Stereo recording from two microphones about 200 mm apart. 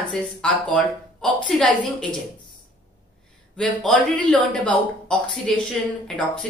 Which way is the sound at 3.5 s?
5° left (ahead or behind).